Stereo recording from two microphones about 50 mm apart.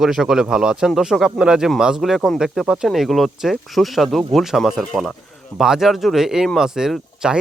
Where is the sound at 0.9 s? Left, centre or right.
Centre.